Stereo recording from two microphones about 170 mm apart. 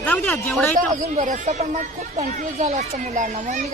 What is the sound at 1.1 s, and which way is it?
Speech, 45° right (ahead or behind).